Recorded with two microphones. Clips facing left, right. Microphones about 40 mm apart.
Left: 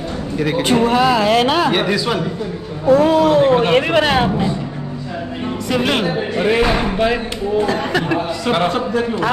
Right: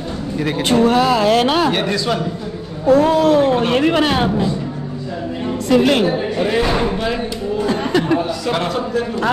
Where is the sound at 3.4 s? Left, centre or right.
Left.